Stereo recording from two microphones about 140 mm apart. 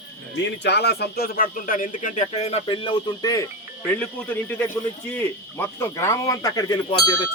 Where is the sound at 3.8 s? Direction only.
10° left (ahead or behind).